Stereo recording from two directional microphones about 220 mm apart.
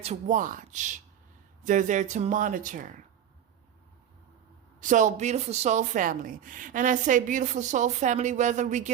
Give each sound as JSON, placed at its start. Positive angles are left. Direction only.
{"t": 0.0, "sound": "speech", "side_deg": -30}
{"t": 4.8, "sound": "speech", "side_deg": -35}